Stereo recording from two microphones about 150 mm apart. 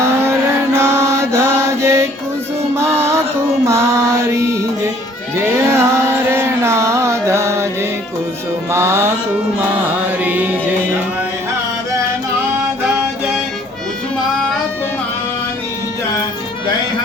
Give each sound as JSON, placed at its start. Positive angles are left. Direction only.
{"t": 0.0, "sound": "chant", "side_deg": -20}
{"t": 3.7, "sound": "mantra", "side_deg": -20}
{"t": 5.4, "sound": "music", "side_deg": -15}